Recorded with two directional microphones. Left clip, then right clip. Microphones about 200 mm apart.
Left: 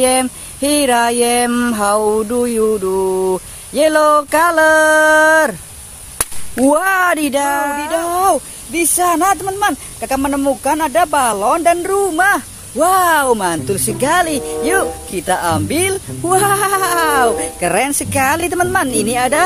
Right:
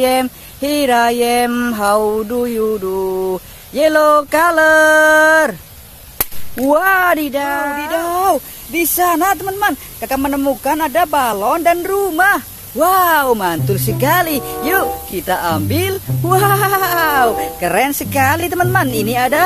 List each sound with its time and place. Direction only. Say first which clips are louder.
0.0 s speech: even; 5° left (ahead or behind)
6.7 s speech: right 2 dB; 20° left (ahead or behind)
7.9 s speech: even; centre (ahead or behind)
14.1 s speech: left 1 dB; 10° right (ahead or behind)